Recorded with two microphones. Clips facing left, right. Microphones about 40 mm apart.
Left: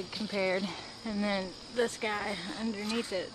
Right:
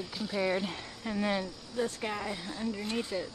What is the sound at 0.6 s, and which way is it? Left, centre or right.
Speech, centre.